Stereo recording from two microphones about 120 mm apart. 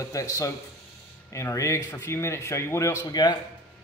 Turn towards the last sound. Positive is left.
turn(degrees=30)  # may be behind; listen again after turning